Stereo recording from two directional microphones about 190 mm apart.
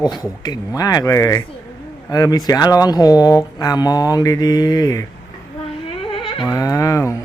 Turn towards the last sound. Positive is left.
turn(degrees=15)  # may be behind; listen again after turning